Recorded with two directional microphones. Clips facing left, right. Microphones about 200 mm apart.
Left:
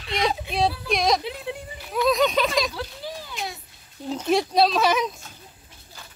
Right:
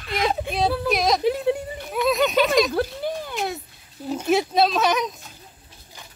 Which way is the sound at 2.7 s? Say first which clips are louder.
Right 9 dB; 55° right (ahead or behind).